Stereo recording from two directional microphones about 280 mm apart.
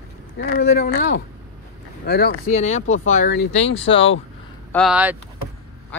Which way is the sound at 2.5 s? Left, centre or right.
Left.